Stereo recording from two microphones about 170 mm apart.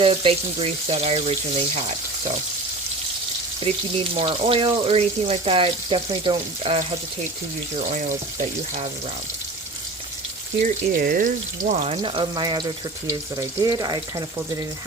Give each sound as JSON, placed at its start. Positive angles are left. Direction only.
{"t": 0.0, "sound": "speech", "side_deg": -35}
{"t": 3.6, "sound": "speech", "side_deg": -30}
{"t": 7.9, "sound": "speech", "side_deg": -50}
{"t": 10.6, "sound": "speech", "side_deg": -55}
{"t": 11.7, "sound": "speech", "side_deg": -40}